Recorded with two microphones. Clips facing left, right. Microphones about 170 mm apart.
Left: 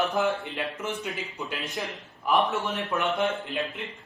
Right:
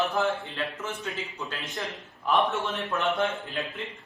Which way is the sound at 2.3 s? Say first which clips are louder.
Left 1 dB; centre (ahead or behind).